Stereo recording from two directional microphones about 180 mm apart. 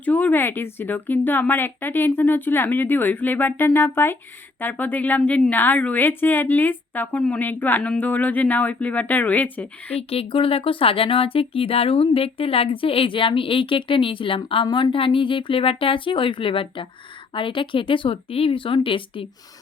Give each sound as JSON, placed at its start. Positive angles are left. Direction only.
{"t": 0.0, "sound": "a woman's voice", "side_deg": 10}
{"t": 9.9, "sound": "speech", "side_deg": 30}